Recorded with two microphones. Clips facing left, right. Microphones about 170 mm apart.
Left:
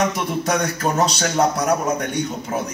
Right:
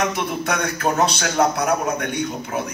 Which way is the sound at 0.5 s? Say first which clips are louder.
Left 1 dB; 40° left (ahead or behind).